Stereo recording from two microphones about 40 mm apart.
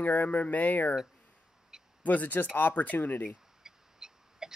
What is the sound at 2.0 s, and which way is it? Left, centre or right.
Speech, left.